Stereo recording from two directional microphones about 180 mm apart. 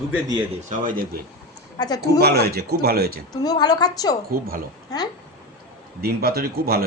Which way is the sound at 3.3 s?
20° left (ahead or behind).